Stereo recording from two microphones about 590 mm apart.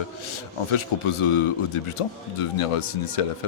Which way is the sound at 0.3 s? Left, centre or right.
Left.